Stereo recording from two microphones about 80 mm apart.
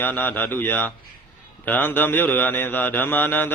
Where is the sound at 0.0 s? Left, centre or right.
Left.